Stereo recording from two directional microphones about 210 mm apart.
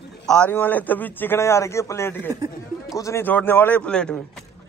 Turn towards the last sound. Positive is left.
turn(degrees=5)  # may be behind; listen again after turning